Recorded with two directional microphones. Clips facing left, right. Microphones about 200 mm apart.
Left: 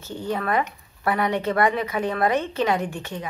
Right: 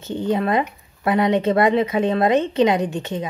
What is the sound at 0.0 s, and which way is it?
Speech, 20° right (ahead or behind).